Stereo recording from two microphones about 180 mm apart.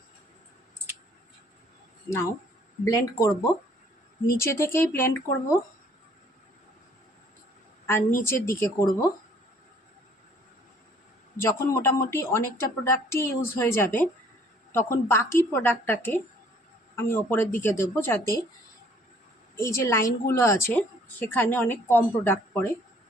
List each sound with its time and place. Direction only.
2.8 s a woman's voice: 20° left (ahead or behind)
4.4 s a woman's voice: 15° left (ahead or behind)
7.9 s a woman's voice: 15° left (ahead or behind)
11.3 s a woman's voice: 15° left (ahead or behind)
19.5 s a woman's voice: 15° left (ahead or behind)